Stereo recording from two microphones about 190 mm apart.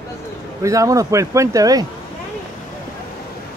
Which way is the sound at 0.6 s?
15° right (ahead or behind).